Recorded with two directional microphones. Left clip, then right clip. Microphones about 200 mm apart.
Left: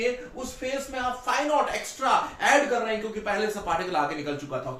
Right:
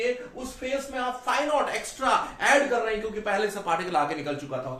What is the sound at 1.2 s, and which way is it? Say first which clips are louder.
A man's voice: left 1 dB; 15° right (ahead or behind).